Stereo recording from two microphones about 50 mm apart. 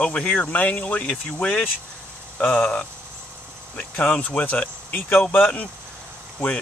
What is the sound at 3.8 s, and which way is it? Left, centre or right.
Speech, left.